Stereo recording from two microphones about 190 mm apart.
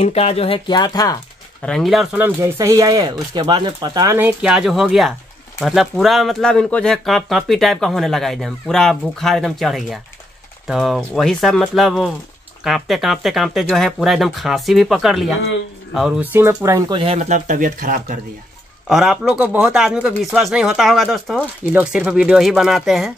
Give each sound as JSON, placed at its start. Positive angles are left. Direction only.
{"t": 0.0, "sound": "speech", "side_deg": 35}
{"t": 1.6, "sound": "speech", "side_deg": 0}
{"t": 4.4, "sound": "speech", "side_deg": -5}
{"t": 16.9, "sound": "speech", "side_deg": -30}
{"t": 18.9, "sound": "speech", "side_deg": 0}